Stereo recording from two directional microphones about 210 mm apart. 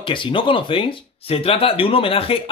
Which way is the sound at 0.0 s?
25° left (ahead or behind).